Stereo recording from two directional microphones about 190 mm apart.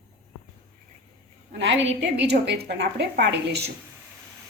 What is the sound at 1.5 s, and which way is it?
A woman's voice, 70° right (ahead or behind).